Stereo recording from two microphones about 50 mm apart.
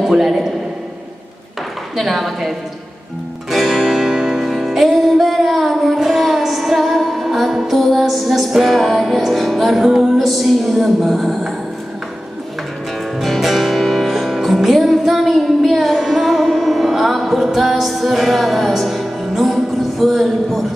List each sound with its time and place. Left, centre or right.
0.0 s a man's voice: centre
2.0 s music: centre
10.1 s music: centre
13.2 s music: centre